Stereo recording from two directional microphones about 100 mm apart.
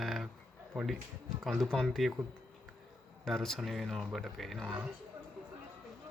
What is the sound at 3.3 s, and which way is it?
Speech, 5° left (ahead or behind).